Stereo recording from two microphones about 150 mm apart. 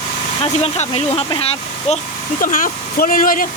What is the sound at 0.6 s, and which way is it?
Speech, 45° left (ahead or behind).